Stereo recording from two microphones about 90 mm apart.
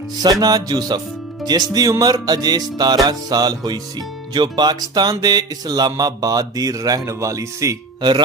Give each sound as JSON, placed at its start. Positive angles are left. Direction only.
{"t": 0.2, "sound": "music", "side_deg": -45}